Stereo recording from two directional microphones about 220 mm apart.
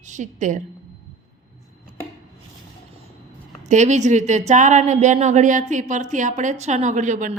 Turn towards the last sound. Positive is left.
turn(degrees=-35)  # may be behind; listen again after turning